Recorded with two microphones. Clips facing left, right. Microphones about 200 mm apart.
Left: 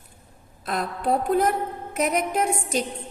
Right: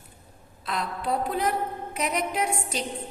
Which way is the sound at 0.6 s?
50° left (ahead or behind).